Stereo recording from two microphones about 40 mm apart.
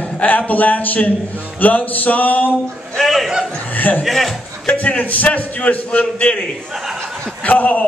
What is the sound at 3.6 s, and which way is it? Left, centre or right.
Music, left.